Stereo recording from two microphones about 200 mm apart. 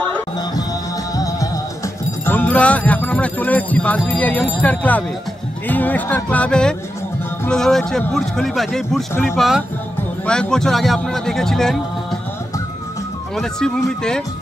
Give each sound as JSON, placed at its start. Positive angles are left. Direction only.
{"t": 1.1, "sound": "music", "side_deg": 15}
{"t": 5.7, "sound": "a man's voice", "side_deg": 10}
{"t": 13.4, "sound": "a man's voice", "side_deg": 0}